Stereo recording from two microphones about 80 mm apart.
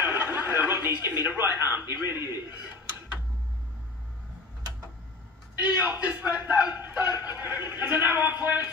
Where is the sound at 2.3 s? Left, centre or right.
Right.